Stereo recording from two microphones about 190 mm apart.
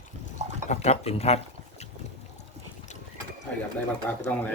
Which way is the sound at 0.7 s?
35° left (ahead or behind).